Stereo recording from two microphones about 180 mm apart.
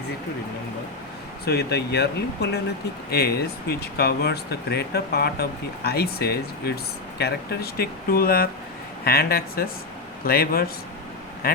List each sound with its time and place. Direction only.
1.5 s speech: 65° left (ahead or behind)